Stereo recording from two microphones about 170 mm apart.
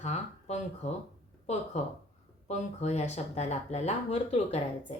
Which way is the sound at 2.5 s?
40° left (ahead or behind).